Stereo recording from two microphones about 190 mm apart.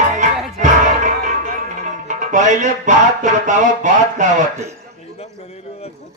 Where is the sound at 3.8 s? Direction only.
40° right (ahead or behind).